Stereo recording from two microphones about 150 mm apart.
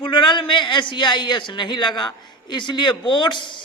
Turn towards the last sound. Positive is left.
turn(degrees=30)  # may be behind; listen again after turning